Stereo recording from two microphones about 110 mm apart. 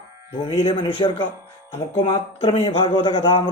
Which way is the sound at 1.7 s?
40° left (ahead or behind).